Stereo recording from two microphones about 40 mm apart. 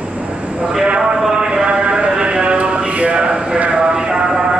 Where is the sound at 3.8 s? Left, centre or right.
Centre.